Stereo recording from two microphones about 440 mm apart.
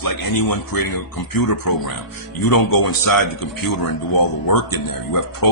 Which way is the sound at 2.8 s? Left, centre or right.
Left.